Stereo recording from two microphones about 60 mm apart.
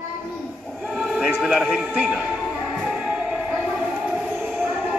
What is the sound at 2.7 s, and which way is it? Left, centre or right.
Music, centre.